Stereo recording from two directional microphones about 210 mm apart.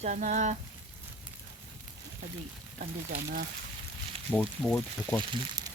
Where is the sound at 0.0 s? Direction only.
35° right (ahead or behind).